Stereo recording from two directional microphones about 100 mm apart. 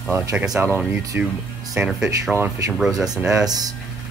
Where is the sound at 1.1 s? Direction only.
15° right (ahead or behind).